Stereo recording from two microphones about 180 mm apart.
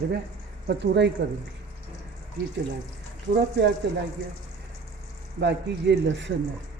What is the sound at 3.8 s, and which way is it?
Speech, 70° right (ahead or behind).